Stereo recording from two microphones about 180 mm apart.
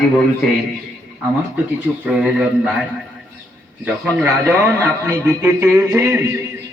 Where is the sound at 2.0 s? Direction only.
5° right (ahead or behind).